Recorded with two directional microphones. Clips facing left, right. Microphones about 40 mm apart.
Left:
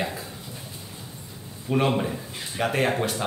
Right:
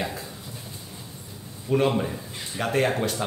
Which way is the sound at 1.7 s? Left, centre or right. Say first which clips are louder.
Right 1 dB; centre.